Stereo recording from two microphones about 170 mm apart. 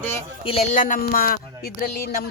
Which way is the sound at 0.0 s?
15° left (ahead or behind).